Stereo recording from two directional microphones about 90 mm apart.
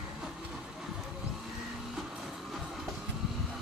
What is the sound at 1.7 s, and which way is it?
Train, 5° right (ahead or behind).